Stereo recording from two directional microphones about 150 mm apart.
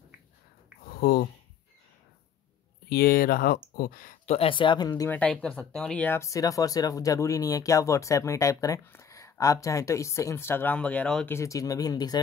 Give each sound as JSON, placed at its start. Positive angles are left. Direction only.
{"t": 0.8, "sound": "a sound", "side_deg": 90}
{"t": 2.9, "sound": "speech", "side_deg": 90}
{"t": 4.3, "sound": "speech", "side_deg": 40}
{"t": 5.1, "sound": "speech", "side_deg": 5}
{"t": 11.3, "sound": "speech", "side_deg": 20}